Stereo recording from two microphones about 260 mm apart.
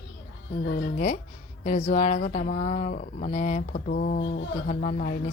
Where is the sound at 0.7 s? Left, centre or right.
Left.